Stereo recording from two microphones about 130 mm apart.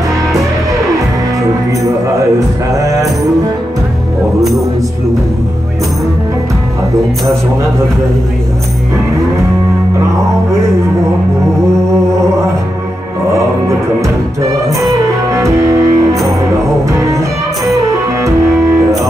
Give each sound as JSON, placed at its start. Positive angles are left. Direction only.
{"t": 2.8, "sound": "music", "side_deg": -25}
{"t": 4.4, "sound": "music", "side_deg": 0}
{"t": 14.8, "sound": "music", "side_deg": -25}